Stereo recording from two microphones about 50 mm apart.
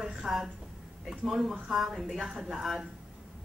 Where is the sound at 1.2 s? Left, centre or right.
Centre.